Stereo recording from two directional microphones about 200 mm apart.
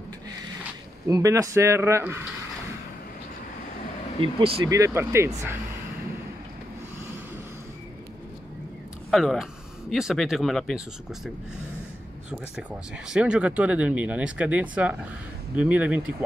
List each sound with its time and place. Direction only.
1.0 s speech: 15° right (ahead or behind)
4.2 s speech: 20° right (ahead or behind)
9.1 s speech: centre (ahead or behind)
13.1 s speech: 5° right (ahead or behind)